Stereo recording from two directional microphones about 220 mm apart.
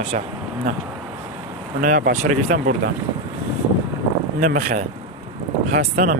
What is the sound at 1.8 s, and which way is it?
Speech, 40° right (ahead or behind).